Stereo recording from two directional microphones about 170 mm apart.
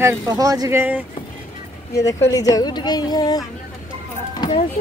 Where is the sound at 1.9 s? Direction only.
20° left (ahead or behind).